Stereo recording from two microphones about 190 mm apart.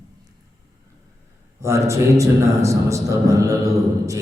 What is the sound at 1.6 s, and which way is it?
A man's voice, 15° right (ahead or behind).